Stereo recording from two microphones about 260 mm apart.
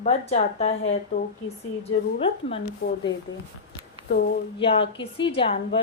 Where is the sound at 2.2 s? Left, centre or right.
Left.